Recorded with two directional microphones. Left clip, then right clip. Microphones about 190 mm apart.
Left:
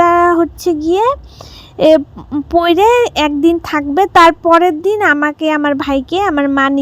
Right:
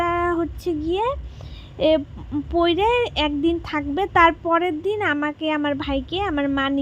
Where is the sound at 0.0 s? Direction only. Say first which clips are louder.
Left 12 dB; 45° left (ahead or behind).